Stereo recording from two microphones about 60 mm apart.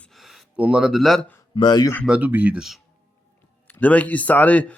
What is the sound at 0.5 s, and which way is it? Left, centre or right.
Speech, right.